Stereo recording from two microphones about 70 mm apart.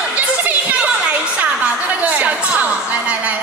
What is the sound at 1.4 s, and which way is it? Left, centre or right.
A woman's voice, centre.